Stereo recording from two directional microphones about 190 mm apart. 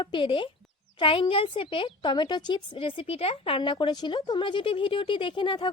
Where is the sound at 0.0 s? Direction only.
25° left (ahead or behind).